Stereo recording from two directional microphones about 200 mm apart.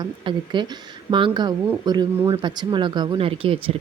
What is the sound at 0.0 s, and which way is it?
Speech, 20° right (ahead or behind).